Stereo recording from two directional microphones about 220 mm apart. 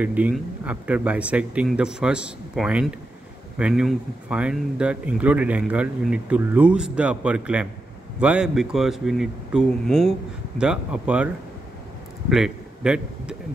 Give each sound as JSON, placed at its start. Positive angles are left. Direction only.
{"t": 0.0, "sound": "speech", "side_deg": -5}
{"t": 12.3, "sound": "a man's voice", "side_deg": 0}